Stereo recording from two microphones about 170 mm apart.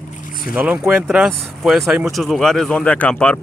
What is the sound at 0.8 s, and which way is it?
Speech, 10° right (ahead or behind).